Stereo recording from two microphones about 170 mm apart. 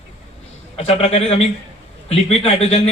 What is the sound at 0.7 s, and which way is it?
A man's voice, 35° left (ahead or behind).